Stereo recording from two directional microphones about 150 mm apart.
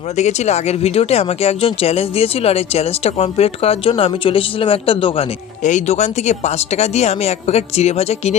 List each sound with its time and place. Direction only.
0.2 s speech: 50° left (ahead or behind)
5.6 s speech: 50° left (ahead or behind)